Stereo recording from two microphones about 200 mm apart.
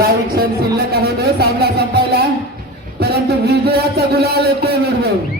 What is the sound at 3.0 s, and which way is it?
A man's voice, 55° right (ahead or behind).